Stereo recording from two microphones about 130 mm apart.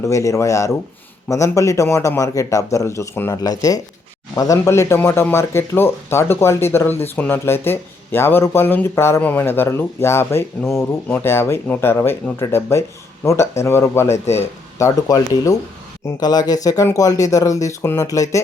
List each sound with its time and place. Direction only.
0.0 s speech: 25° left (ahead or behind)